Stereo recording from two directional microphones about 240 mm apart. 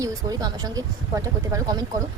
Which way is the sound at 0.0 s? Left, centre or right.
Centre.